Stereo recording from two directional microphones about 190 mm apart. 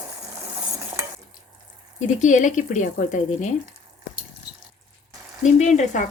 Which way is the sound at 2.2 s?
40° left (ahead or behind).